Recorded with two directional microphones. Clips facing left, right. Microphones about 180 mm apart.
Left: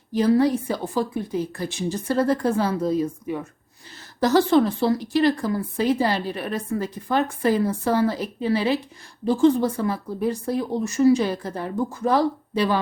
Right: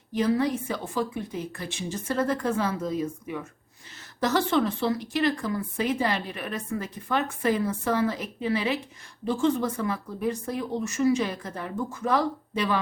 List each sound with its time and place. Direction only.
0.1 s speech: 35° left (ahead or behind)